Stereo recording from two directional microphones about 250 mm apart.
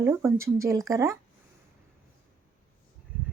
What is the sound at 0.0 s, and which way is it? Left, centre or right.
Speech, centre.